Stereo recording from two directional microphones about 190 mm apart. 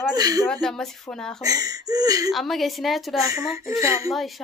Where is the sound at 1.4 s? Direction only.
20° right (ahead or behind).